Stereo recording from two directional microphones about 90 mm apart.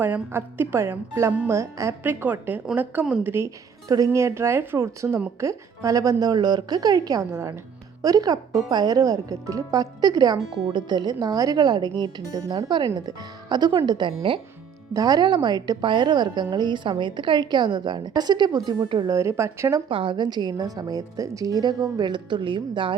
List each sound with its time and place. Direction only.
0.0 s a woman's voice: 25° right (ahead or behind)
2.0 s a woman's voice: 20° right (ahead or behind)
3.8 s a woman's voice: 40° right (ahead or behind)
7.3 s a woman's voice: 30° right (ahead or behind)
8.0 s a woman's voice: 45° right (ahead or behind)
10.7 s a woman's voice: 55° right (ahead or behind)
14.3 s speech: 70° right (ahead or behind)
14.9 s a woman's voice: 45° right (ahead or behind)
19.0 s speech: 35° right (ahead or behind)
19.9 s a woman's voice: 65° right (ahead or behind)